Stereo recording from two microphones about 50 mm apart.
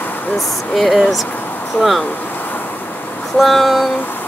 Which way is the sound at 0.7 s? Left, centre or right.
Centre.